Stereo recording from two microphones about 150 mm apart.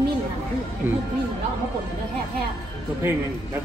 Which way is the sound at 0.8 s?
10° right (ahead or behind).